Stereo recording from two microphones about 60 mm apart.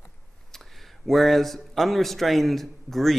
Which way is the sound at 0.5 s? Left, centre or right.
Centre.